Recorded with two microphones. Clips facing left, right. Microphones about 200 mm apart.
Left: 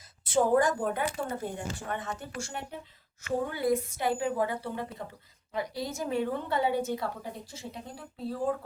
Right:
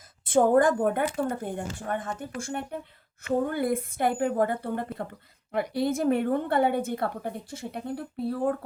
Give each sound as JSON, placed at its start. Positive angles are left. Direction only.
{"t": 0.3, "sound": "a woman's voice", "side_deg": -50}